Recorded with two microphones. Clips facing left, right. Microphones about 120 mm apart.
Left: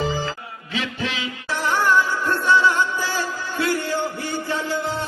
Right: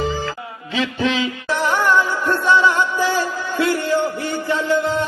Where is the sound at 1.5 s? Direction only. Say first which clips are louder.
Right 2 dB; 20° right (ahead or behind).